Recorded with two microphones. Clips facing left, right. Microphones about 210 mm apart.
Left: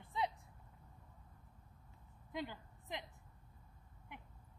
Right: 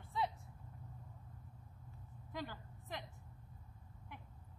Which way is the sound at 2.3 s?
20° left (ahead or behind).